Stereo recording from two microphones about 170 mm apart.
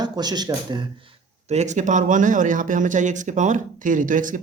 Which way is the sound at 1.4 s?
45° right (ahead or behind).